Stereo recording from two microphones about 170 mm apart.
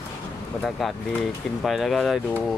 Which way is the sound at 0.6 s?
Centre (ahead or behind).